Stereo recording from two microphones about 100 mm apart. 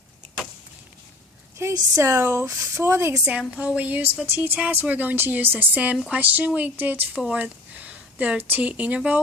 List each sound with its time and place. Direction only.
1.6 s speech: 25° right (ahead or behind)
3.2 s speech: 10° right (ahead or behind)